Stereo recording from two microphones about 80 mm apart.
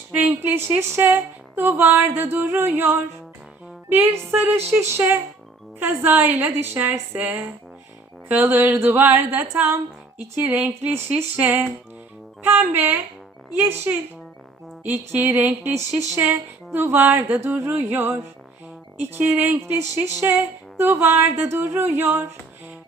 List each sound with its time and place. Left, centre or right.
0.1 s a woman's voice: right